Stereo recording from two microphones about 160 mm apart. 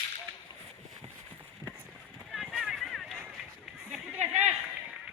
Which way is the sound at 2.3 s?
5° right (ahead or behind).